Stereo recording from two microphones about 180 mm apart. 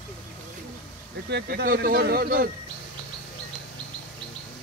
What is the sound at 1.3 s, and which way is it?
Speech, 60° right (ahead or behind).